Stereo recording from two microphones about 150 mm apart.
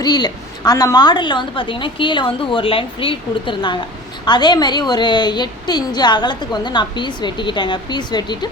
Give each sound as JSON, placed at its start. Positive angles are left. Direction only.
{"t": 0.0, "sound": "a woman's voice", "side_deg": 25}